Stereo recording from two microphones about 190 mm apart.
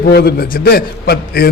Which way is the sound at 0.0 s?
55° left (ahead or behind).